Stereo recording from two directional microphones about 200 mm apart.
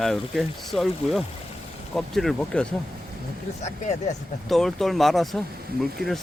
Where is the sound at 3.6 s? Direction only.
35° left (ahead or behind).